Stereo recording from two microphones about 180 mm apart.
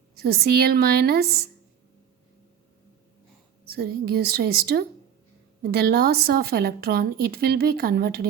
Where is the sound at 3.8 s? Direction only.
60° right (ahead or behind).